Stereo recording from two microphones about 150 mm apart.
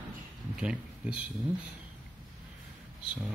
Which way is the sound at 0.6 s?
10° right (ahead or behind).